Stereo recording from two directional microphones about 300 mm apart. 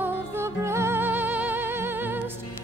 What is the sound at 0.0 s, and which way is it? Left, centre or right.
Music, centre.